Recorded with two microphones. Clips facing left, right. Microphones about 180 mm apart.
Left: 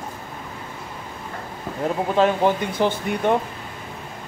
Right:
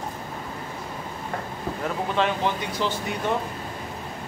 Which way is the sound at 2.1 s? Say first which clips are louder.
Left 7 dB; 45° left (ahead or behind).